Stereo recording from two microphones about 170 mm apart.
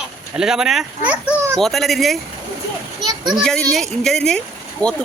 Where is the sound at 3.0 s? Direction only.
25° right (ahead or behind).